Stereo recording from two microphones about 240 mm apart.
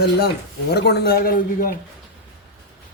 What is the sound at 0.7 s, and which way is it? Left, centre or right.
Speech, left.